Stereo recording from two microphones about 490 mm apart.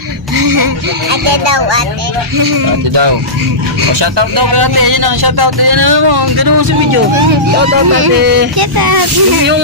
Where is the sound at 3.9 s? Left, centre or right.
Right.